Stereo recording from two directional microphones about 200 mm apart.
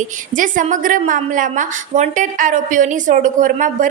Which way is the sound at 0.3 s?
40° right (ahead or behind).